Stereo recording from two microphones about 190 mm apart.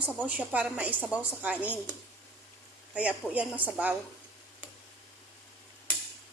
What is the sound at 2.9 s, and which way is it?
A woman's voice, 5° right (ahead or behind).